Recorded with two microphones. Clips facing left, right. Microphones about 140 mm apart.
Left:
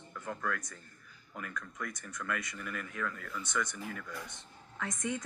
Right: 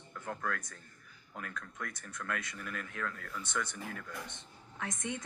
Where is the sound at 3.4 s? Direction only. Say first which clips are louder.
Left 2 dB; 30° right (ahead or behind).